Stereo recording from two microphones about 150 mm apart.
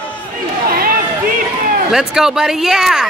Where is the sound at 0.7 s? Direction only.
80° right.